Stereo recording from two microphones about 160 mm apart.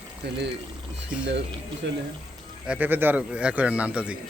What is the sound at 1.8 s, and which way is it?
Speech, 90° right.